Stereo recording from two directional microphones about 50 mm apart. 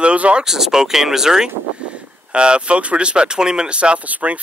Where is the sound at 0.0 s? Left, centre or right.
Right.